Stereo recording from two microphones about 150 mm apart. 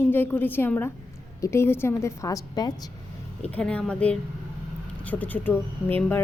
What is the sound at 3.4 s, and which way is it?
A woman's voice, 10° left (ahead or behind).